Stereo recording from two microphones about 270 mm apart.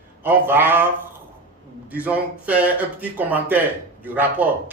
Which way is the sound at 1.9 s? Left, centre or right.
Centre.